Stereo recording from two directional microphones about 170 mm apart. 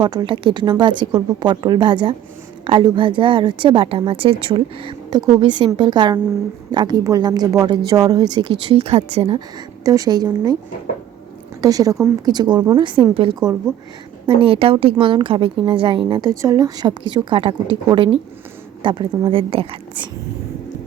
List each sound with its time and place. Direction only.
0.0 s a woman's voice: 25° right (ahead or behind)
9.8 s a woman's voice: 20° right (ahead or behind)
11.6 s a woman's voice: 20° right (ahead or behind)